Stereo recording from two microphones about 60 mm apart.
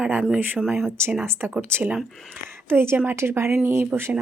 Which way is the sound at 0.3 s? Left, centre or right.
Right.